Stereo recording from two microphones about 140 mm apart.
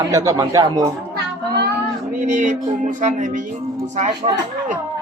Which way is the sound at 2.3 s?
60° right (ahead or behind).